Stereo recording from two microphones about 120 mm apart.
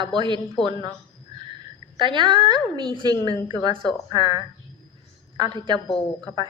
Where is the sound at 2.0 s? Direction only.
45° right (ahead or behind).